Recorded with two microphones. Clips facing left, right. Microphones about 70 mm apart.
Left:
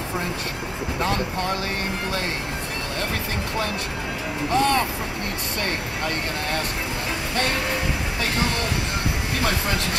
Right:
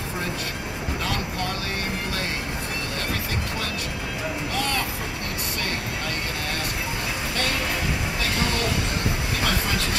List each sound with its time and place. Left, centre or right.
4.5 s vehicle: left